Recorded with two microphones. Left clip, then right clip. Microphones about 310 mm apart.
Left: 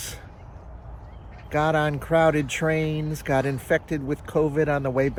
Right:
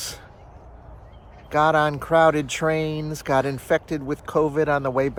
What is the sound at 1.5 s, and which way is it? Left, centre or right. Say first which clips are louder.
Speech: right 4 dB; centre.